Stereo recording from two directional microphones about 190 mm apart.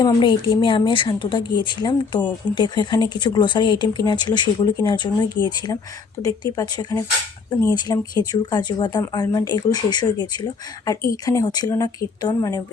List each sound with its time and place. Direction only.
0.0 s speech: 25° left (ahead or behind)